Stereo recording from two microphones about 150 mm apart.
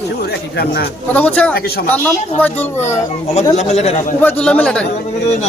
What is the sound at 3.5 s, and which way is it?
Speech, 45° left (ahead or behind).